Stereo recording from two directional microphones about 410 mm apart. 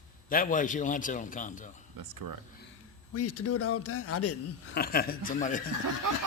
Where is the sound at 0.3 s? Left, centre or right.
Centre.